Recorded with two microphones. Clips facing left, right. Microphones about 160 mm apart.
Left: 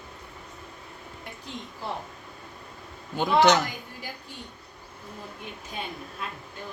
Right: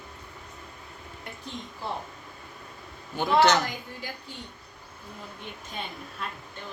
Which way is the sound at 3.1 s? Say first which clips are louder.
Left 1 dB; 15° left (ahead or behind).